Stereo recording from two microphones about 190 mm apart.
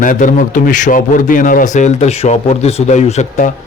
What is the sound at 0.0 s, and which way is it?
A man's voice, 45° left (ahead or behind).